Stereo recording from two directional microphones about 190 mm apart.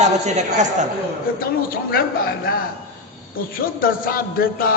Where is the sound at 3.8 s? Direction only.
50° left (ahead or behind).